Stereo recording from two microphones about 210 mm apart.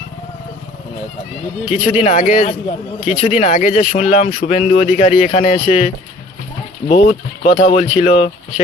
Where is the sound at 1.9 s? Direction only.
30° left (ahead or behind).